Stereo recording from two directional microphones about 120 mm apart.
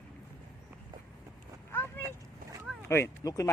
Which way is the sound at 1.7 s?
20° left (ahead or behind).